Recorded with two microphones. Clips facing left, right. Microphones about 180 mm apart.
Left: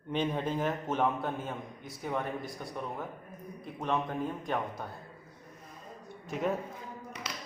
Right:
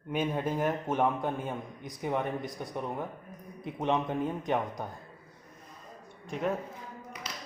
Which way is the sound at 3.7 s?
20° right (ahead or behind).